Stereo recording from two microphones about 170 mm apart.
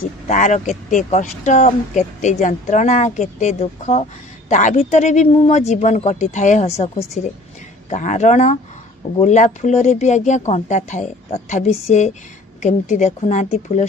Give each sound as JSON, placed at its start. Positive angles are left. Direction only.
{"t": 0.3, "sound": "speech", "side_deg": 45}